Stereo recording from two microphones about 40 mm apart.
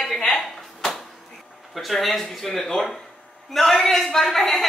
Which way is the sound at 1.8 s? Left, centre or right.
Centre.